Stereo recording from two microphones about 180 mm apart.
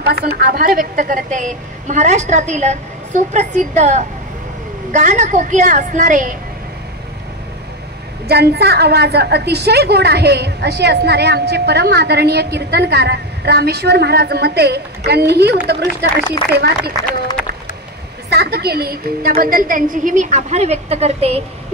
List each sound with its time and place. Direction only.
0.1 s a woman's voice: 60° right (ahead or behind)
8.3 s a woman's voice: 60° right (ahead or behind)
18.3 s a woman's voice: 65° right (ahead or behind); by 21.4 s 35° right (ahead or behind)